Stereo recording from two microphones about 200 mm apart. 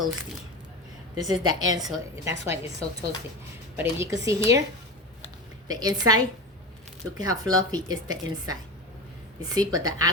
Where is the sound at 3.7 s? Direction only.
15° right (ahead or behind).